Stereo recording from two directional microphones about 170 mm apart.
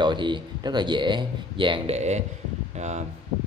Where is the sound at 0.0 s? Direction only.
25° right (ahead or behind).